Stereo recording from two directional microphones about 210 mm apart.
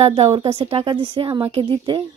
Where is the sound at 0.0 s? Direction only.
30° right (ahead or behind).